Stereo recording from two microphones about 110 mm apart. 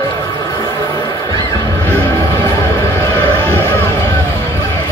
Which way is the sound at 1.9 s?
20° left (ahead or behind).